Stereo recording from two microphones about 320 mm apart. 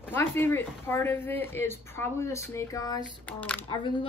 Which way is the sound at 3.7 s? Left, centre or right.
Centre.